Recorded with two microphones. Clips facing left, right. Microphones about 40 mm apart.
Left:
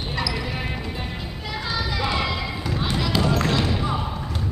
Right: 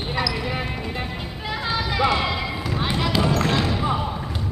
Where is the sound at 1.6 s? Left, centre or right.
Right.